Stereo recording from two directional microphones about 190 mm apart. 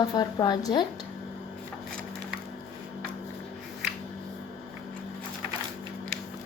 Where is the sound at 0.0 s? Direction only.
20° left (ahead or behind).